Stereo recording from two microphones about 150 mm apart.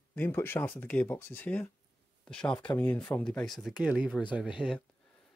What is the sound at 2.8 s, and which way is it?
Speech, 10° left (ahead or behind).